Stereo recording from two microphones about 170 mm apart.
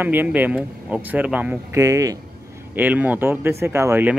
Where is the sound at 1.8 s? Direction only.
20° right (ahead or behind).